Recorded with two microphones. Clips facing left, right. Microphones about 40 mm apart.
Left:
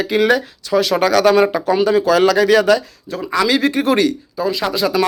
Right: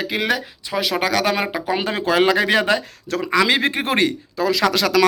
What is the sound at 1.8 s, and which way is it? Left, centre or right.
Speech, right.